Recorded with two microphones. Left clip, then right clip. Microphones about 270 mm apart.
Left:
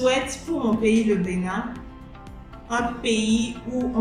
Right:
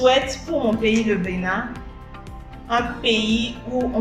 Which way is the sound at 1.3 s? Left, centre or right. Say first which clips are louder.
Right 4 dB; left.